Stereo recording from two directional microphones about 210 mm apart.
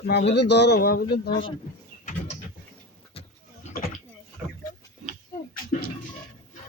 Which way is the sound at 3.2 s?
25° left (ahead or behind).